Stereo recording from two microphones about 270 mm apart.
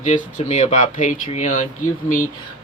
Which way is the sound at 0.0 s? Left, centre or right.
Left.